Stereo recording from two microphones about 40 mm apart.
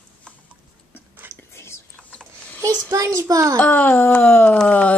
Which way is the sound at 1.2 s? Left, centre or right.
Right.